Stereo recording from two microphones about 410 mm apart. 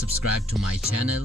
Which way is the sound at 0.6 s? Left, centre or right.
Centre.